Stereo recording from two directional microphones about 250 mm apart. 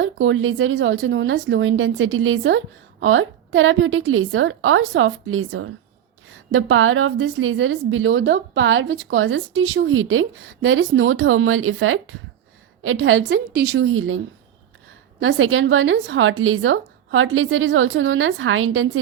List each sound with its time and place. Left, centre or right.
0.0 s speech: right
15.2 s speech: right